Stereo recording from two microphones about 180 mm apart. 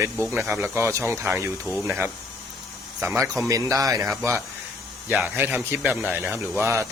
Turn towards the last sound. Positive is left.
turn(degrees=-15)  # may be behind; listen again after turning